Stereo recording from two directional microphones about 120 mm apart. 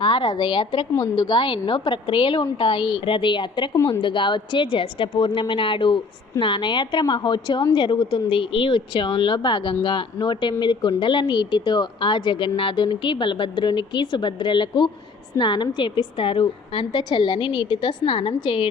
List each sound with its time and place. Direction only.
0.0 s a woman's voice: 40° left (ahead or behind)